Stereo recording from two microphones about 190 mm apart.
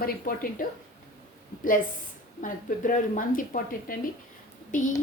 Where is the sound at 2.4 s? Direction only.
45° left (ahead or behind).